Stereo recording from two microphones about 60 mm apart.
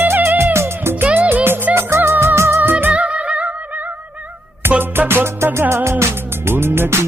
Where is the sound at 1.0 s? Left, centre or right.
Right.